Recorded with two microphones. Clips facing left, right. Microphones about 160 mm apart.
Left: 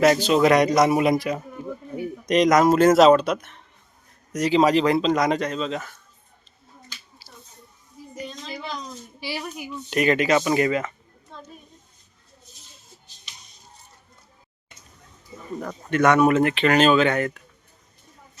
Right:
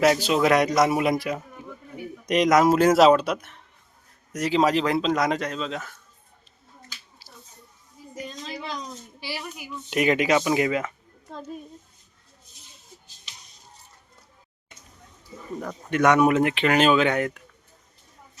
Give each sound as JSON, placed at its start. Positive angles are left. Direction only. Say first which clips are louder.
{"t": 0.0, "sound": "speech", "louder": "left 3 dB", "side_deg": -5}
{"t": 7.2, "sound": "finger snapping", "louder": "left 2 dB", "side_deg": 5}
{"t": 8.1, "sound": "a sound", "louder": "left 1 dB", "side_deg": -5}
{"t": 9.2, "sound": "speech", "louder": "left 3 dB", "side_deg": 15}
{"t": 9.6, "sound": "speech", "louder": "left 1 dB", "side_deg": -10}
{"t": 15.9, "sound": "speech", "louder": "left 1 dB", "side_deg": -15}